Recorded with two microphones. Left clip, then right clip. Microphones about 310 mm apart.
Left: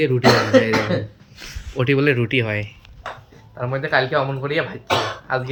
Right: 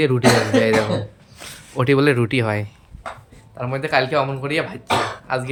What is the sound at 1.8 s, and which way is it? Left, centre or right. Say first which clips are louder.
A man's voice: right 2 dB; centre.